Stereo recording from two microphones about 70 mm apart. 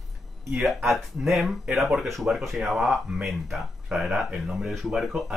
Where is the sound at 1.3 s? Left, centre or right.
Centre.